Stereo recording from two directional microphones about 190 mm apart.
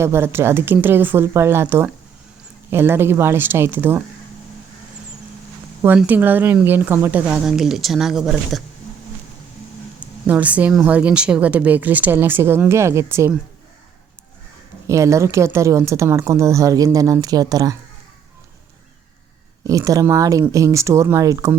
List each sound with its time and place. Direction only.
0.0 s speech: 15° right (ahead or behind)
5.8 s speech: 10° right (ahead or behind)
10.2 s speech: 10° right (ahead or behind)
14.8 s speech: 15° right (ahead or behind)
19.6 s speech: 15° right (ahead or behind)